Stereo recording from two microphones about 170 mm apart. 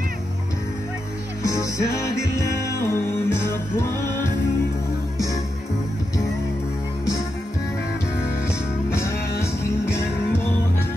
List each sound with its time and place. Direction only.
1.4 s music: 20° left (ahead or behind)
8.9 s music: 15° left (ahead or behind)